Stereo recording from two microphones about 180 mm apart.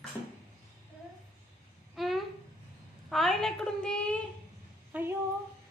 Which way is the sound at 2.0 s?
Centre (ahead or behind).